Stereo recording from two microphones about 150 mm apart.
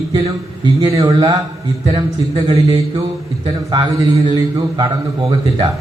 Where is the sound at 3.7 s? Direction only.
30° right (ahead or behind).